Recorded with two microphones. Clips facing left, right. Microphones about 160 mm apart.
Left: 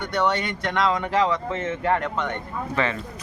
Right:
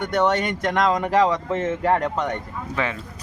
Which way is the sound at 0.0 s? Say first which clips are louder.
Right 3 dB; 45° right (ahead or behind).